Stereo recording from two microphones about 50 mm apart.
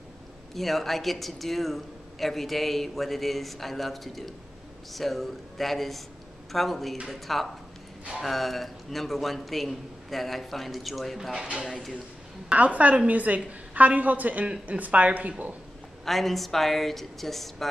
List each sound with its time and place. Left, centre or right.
0.6 s a man's voice: centre
11.3 s a woman's voice: right
11.6 s a man's voice: centre
12.4 s a woman's voice: right
14.4 s a woman's voice: centre
16.1 s a man's voice: centre